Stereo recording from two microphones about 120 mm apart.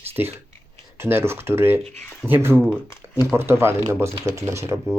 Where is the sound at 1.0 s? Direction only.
20° right (ahead or behind).